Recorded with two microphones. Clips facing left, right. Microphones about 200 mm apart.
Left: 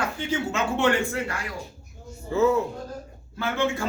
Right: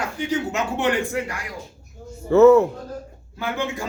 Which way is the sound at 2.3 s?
70° right (ahead or behind).